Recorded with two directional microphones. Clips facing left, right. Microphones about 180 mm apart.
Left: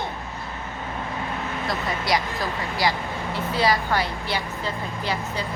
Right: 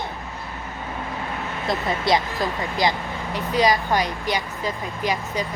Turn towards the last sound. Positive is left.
turn(degrees=-15)  # may be behind; listen again after turning